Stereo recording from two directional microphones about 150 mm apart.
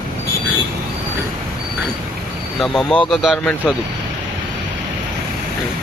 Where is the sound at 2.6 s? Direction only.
5° left (ahead or behind).